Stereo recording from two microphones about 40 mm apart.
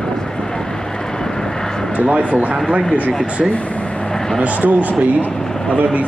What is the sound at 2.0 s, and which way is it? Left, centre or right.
Speech, right.